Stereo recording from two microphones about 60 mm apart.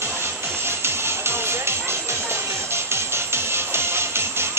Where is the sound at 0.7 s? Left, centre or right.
Right.